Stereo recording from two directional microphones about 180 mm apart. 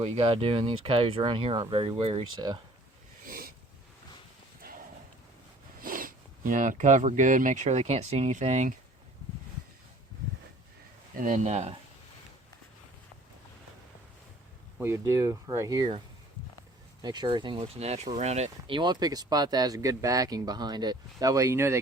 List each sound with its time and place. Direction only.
0.0 s speech: 30° right (ahead or behind)
3.2 s a sound: 55° right (ahead or behind)
4.6 s horse: 55° right (ahead or behind)
5.8 s speech: 50° right (ahead or behind)
11.1 s speech: 50° right (ahead or behind)
14.8 s speech: 15° right (ahead or behind)
17.0 s speech: 25° right (ahead or behind)
18.8 s speech: 25° right (ahead or behind)